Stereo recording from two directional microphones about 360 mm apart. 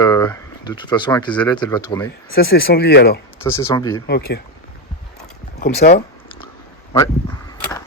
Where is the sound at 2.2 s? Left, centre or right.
Left.